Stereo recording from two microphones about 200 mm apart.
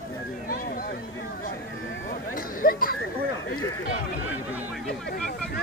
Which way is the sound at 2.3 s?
45° left (ahead or behind).